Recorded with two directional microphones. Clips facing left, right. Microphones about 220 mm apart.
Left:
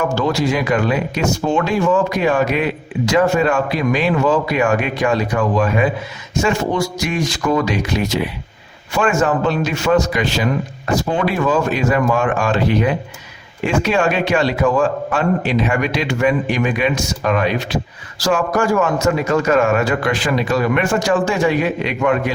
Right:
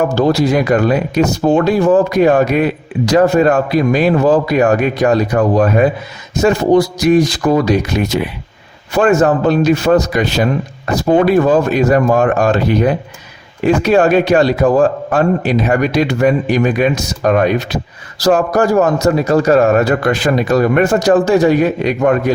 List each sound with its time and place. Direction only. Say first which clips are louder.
0.0 s a man's voice: right 5 dB; 35° right (ahead or behind)
9.0 s a man's voice: right 5 dB; 40° right (ahead or behind)
11.4 s a man's voice: right 5 dB; 40° right (ahead or behind)